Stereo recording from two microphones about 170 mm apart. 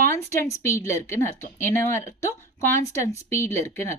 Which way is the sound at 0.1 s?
15° left (ahead or behind).